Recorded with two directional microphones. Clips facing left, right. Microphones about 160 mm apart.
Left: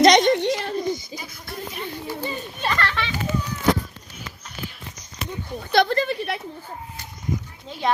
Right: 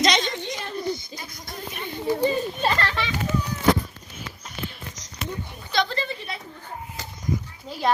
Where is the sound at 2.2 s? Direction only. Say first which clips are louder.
Right 5 dB; 35° right (ahead or behind).